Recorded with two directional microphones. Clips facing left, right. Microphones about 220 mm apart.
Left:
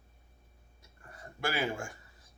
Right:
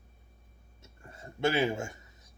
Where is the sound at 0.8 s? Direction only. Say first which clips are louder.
Right 2 dB; 25° right (ahead or behind).